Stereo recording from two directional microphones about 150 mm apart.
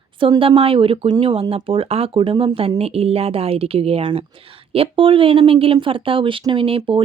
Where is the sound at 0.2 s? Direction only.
35° right (ahead or behind).